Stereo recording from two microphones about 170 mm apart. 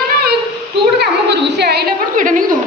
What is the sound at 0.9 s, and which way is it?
Speech, 80° right.